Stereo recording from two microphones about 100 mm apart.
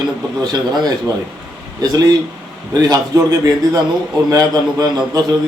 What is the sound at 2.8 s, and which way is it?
A man's voice, 35° right (ahead or behind).